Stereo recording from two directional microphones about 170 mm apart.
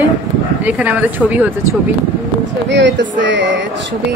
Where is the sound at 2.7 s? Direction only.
90° right.